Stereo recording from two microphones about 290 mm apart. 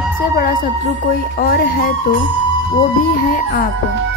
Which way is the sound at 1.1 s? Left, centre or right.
Left.